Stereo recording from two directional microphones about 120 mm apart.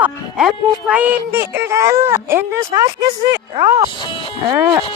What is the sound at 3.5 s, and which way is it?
Speech, 40° right (ahead or behind).